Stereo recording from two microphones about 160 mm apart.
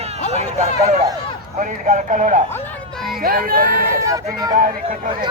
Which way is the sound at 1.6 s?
55° right (ahead or behind).